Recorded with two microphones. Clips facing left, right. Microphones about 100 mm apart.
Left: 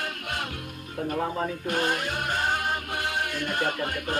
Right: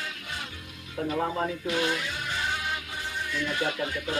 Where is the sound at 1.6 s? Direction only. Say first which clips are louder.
Left 1 dB; 50° left (ahead or behind).